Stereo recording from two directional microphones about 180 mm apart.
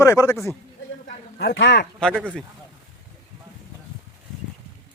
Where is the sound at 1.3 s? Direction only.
70° left (ahead or behind).